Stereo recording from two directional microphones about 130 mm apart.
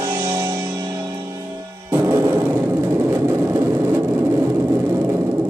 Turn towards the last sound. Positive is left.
turn(degrees=-25)  # may be behind; listen again after turning